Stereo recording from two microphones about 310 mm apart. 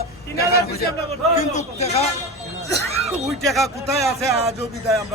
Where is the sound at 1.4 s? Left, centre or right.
Left.